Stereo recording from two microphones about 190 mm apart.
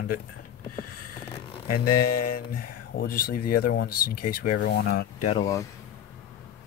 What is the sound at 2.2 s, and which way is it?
Speech, 50° left (ahead or behind).